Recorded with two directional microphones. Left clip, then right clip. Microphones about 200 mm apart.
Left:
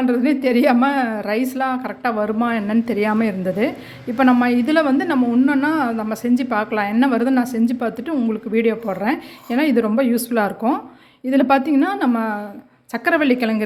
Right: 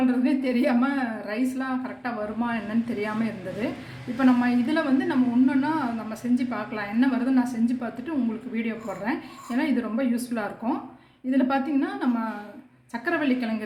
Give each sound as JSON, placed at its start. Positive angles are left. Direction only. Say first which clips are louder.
{"t": 0.1, "sound": "a woman's voice", "louder": "left 7 dB", "side_deg": 55}